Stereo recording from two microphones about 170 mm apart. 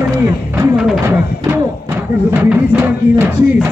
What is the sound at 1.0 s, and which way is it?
Music, 15° right (ahead or behind).